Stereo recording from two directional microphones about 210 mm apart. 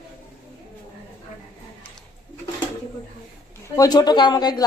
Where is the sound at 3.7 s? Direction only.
15° left (ahead or behind).